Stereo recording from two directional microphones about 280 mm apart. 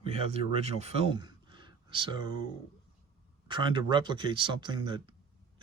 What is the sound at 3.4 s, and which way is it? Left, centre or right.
Speech, centre.